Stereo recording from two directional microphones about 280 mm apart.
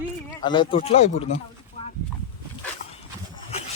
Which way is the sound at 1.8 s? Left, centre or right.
Left.